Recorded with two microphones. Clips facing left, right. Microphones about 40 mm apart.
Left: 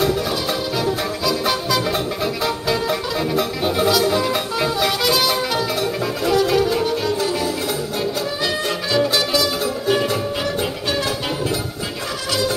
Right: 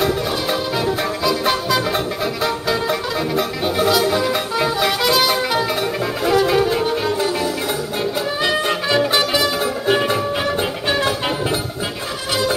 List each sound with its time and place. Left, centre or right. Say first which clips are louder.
0.0 s music: even; centre
8.4 s music: right 3 dB; right
12.3 s music: right 2 dB; right